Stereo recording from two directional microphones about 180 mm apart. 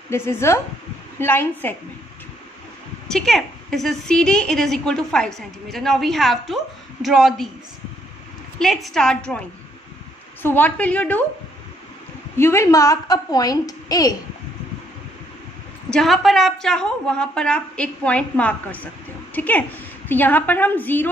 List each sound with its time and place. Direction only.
0.1 s a woman's voice: 15° left (ahead or behind)
3.1 s a woman's voice: centre (ahead or behind)
8.5 s a woman's voice: centre (ahead or behind)
10.4 s a woman's voice: 10° left (ahead or behind)
12.4 s a woman's voice: 15° left (ahead or behind)
15.9 s a woman's voice: centre (ahead or behind)